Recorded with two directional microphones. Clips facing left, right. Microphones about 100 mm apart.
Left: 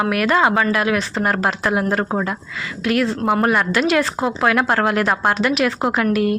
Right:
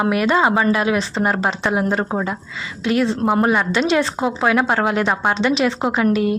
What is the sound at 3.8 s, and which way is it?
Speech, 30° right (ahead or behind).